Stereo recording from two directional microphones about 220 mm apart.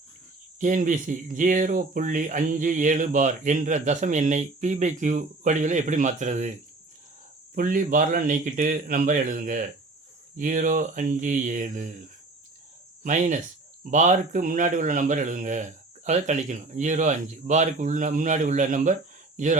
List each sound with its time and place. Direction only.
0.6 s speech: 35° right (ahead or behind)
7.5 s speech: 40° right (ahead or behind)
13.0 s speech: 35° right (ahead or behind)